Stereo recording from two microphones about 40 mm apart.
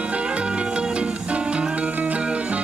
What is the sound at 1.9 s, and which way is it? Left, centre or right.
Music, right.